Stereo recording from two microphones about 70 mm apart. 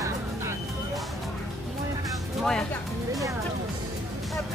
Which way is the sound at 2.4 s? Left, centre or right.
Centre.